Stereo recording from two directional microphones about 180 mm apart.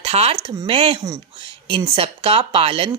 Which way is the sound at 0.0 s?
35° right (ahead or behind).